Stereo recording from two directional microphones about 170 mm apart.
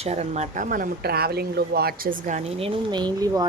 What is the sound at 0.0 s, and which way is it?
Speech, 40° right (ahead or behind).